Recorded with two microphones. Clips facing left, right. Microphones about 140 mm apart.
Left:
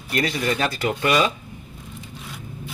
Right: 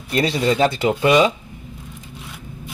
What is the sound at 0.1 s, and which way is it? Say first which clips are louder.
Speech: right 5 dB; 25° right (ahead or behind).